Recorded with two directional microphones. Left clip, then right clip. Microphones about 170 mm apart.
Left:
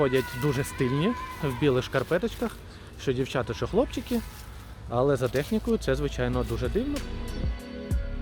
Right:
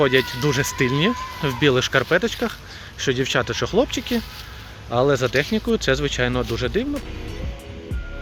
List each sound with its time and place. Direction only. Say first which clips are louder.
0.0 s speech: right 7 dB; 5° left (ahead or behind)